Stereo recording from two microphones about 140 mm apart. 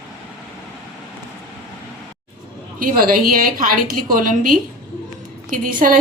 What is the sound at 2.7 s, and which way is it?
A woman's voice, 90° right.